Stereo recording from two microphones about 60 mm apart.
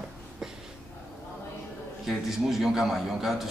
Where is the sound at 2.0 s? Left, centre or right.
Centre.